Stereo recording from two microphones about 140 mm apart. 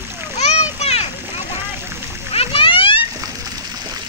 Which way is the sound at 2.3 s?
45° left (ahead or behind).